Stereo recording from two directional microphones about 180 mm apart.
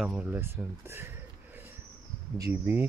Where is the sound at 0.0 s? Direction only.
5° right (ahead or behind).